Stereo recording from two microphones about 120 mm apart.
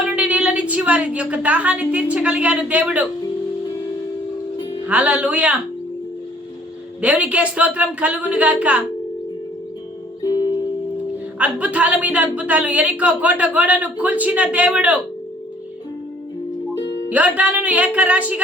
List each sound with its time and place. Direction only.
0.0 s a woman's voice: 10° right (ahead or behind)
4.9 s speech: 10° right (ahead or behind)
7.0 s speech: 10° right (ahead or behind)
10.2 s music: 35° left (ahead or behind)
11.3 s speech: 10° right (ahead or behind)
17.1 s speech: 10° right (ahead or behind)